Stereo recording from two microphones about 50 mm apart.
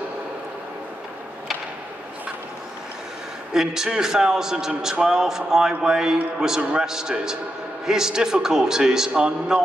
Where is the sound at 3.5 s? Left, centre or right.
Centre.